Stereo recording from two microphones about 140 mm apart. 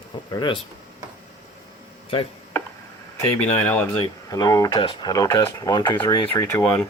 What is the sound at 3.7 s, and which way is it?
Speech, 15° left (ahead or behind).